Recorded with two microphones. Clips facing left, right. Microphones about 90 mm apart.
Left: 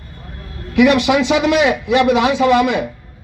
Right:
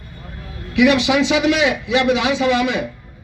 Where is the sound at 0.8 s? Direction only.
50° left (ahead or behind).